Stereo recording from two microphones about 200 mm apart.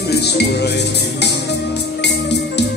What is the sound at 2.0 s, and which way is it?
Music, 60° left (ahead or behind).